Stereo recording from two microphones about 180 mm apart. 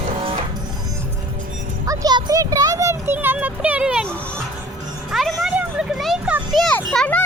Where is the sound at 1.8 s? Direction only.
20° right (ahead or behind).